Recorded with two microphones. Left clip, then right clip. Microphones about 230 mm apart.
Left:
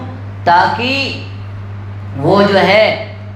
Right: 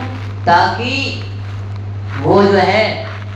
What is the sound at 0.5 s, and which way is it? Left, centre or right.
Speech, left.